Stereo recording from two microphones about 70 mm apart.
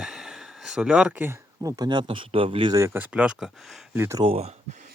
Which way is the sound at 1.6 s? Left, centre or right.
Right.